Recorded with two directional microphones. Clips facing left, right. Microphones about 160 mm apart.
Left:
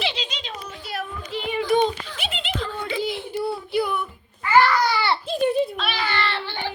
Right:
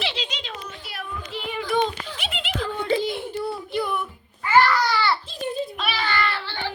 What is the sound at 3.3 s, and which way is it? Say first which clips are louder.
Child singing: left 3 dB; 5° left (ahead or behind).